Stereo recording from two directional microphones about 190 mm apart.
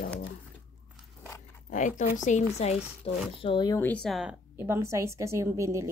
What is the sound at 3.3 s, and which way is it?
Speech, 25° left (ahead or behind).